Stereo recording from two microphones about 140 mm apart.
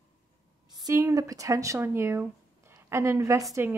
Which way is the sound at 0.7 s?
30° right (ahead or behind).